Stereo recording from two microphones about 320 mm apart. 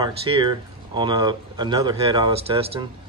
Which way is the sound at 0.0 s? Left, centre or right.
Centre.